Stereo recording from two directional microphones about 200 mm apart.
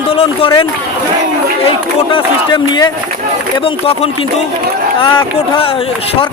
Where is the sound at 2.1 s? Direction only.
25° left (ahead or behind).